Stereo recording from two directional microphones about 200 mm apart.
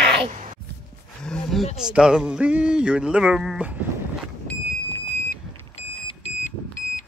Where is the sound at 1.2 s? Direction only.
Centre (ahead or behind).